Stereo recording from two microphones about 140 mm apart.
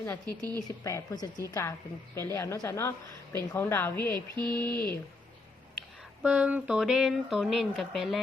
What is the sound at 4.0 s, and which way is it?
Mantra, 30° right (ahead or behind).